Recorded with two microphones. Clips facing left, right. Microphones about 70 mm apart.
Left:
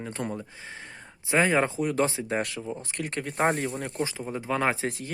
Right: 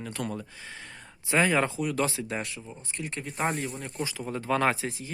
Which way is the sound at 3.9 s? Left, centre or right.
Left.